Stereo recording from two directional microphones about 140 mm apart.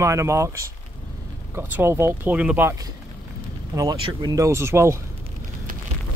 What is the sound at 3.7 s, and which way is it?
Speech, 25° right (ahead or behind).